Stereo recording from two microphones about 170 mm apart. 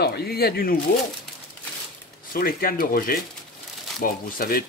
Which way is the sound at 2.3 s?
60° left (ahead or behind).